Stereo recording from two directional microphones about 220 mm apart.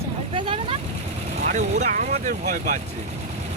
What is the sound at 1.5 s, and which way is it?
Speech, 30° right (ahead or behind).